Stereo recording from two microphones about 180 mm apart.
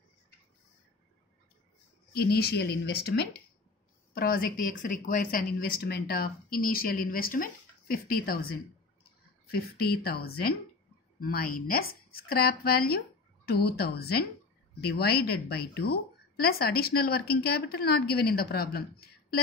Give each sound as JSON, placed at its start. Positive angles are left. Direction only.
{"t": 2.1, "sound": "speech", "side_deg": 60}